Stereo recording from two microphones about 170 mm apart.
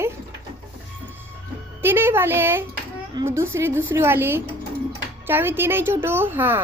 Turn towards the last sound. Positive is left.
turn(degrees=-10)  # may be behind; listen again after turning